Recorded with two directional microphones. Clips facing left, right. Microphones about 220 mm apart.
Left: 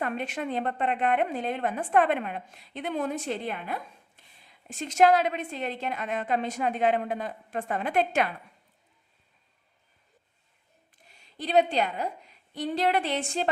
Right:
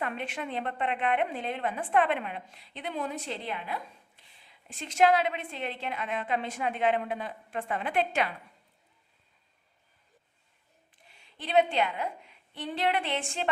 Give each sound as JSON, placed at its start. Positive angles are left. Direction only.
{"t": 0.0, "sound": "a woman's voice", "side_deg": 45}
{"t": 11.1, "sound": "a woman's voice", "side_deg": 40}